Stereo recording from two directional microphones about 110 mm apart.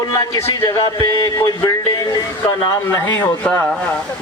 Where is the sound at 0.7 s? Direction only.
35° left (ahead or behind).